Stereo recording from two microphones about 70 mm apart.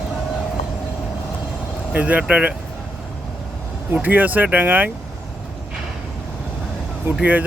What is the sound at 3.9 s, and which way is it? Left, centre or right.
Speech, right.